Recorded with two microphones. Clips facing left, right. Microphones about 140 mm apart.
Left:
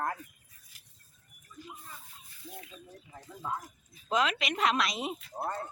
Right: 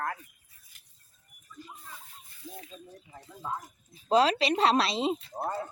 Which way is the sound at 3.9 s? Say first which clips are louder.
Right 6 dB; 35° right (ahead or behind).